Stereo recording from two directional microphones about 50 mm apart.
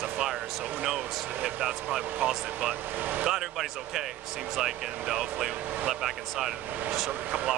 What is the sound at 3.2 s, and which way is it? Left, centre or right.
Speech, centre.